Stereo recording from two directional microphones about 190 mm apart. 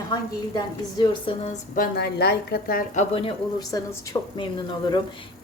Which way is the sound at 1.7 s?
50° left (ahead or behind).